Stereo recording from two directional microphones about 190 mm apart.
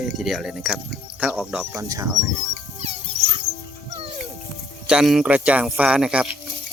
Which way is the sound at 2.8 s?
35° right (ahead or behind).